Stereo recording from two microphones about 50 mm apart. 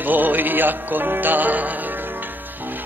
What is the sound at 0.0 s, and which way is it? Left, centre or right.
Music, right.